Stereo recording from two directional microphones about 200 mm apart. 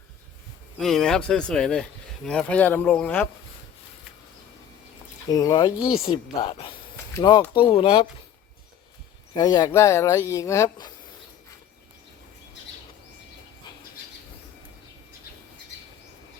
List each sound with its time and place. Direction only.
0.8 s speech: centre (ahead or behind)
5.3 s a woman's voice: 20° left (ahead or behind)
9.3 s speech: 20° left (ahead or behind)